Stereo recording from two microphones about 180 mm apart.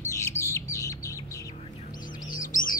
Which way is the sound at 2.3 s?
50° left (ahead or behind).